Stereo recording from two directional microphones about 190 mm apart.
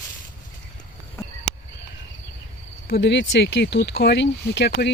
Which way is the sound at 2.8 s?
60° left (ahead or behind).